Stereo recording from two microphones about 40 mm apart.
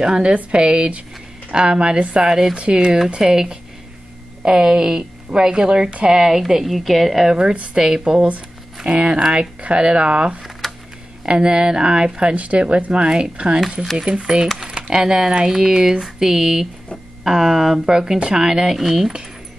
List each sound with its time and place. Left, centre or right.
0.0 s speech: right
2.2 s speech: centre
2.5 s speech: right
2.8 s a woman's voice: centre
7.7 s speech: centre
10.6 s a sound: centre
11.2 s speech: right
18.8 s speech: centre